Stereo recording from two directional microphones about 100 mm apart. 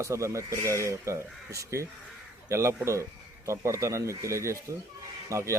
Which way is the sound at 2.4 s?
30° right (ahead or behind).